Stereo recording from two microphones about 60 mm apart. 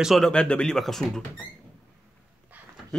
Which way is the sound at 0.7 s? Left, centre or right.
Centre.